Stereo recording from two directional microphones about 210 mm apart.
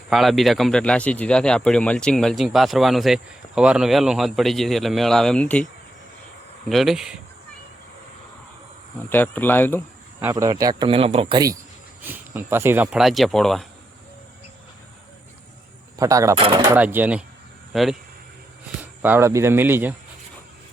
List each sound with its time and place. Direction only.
0.1 s speech: centre (ahead or behind)
6.7 s speech: centre (ahead or behind)
9.0 s speech: 10° left (ahead or behind)
10.3 s speech: 20° right (ahead or behind); by 13.7 s centre (ahead or behind)
16.0 s speech: 15° right (ahead or behind)
16.7 s speech: 10° right (ahead or behind)